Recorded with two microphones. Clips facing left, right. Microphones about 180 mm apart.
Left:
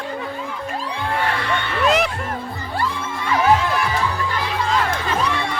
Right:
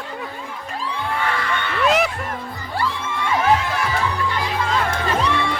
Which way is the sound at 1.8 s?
Centre (ahead or behind).